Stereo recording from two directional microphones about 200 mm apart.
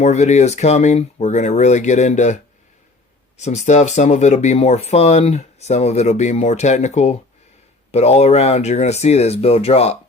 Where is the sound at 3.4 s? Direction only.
35° left (ahead or behind).